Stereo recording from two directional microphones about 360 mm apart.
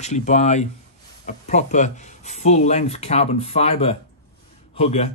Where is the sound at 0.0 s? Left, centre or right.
Centre.